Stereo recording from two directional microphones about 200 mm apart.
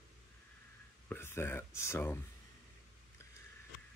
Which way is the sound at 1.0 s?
10° left (ahead or behind).